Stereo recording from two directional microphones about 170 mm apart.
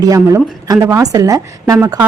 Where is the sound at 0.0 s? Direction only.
20° right (ahead or behind).